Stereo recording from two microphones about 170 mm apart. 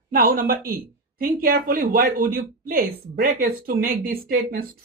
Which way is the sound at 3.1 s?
70° right (ahead or behind).